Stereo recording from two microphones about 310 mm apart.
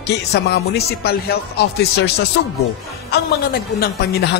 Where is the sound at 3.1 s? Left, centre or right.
Left.